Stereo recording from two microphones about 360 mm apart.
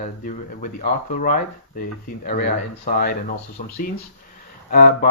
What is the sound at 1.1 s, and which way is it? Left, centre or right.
Speech, left.